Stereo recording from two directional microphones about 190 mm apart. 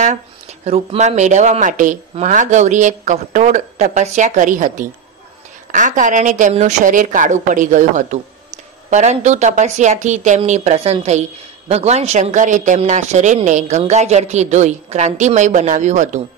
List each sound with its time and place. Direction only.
0.0 s speech: 35° right (ahead or behind)